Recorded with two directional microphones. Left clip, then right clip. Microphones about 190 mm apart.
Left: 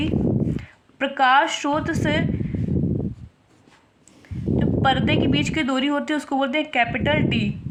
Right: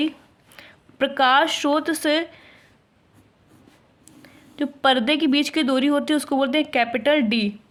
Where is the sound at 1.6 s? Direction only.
50° right (ahead or behind).